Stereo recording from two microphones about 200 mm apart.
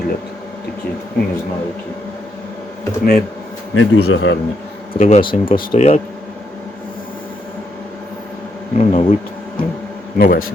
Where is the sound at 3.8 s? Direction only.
85° left; by 4.4 s 70° left (ahead or behind).